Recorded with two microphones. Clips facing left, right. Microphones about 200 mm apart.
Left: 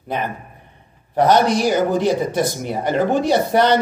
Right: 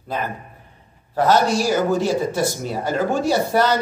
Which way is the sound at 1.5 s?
20° left (ahead or behind).